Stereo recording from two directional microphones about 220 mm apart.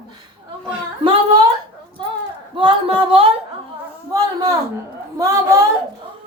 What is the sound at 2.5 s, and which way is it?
Speech, 20° right (ahead or behind).